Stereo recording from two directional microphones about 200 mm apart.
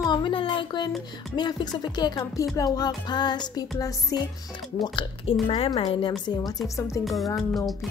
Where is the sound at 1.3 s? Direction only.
20° left (ahead or behind).